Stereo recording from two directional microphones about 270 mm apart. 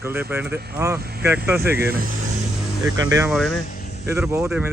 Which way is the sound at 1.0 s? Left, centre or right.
Right.